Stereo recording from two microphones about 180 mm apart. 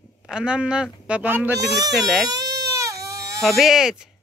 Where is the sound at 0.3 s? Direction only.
5° right (ahead or behind).